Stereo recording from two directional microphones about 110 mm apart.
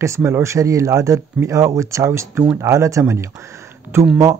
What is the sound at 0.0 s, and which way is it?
Speech, 25° right (ahead or behind).